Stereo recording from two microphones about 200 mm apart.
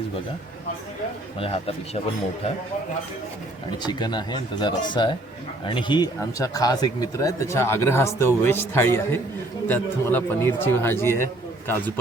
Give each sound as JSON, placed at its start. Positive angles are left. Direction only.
{"t": 1.4, "sound": "speech", "side_deg": 30}
{"t": 3.8, "sound": "speech", "side_deg": 20}